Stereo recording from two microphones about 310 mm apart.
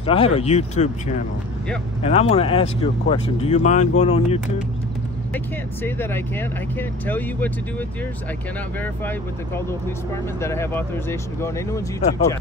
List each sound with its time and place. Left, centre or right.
0.0 s speech: centre
5.3 s speech: centre
10.4 s speech: centre
12.0 s speech: left